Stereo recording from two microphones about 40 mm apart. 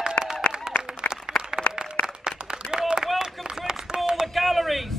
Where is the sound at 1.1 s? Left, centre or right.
Left.